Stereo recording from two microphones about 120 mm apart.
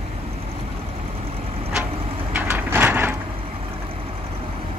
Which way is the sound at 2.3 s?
15° right (ahead or behind).